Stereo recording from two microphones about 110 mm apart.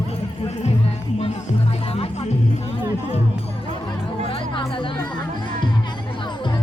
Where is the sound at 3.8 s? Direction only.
55° left (ahead or behind).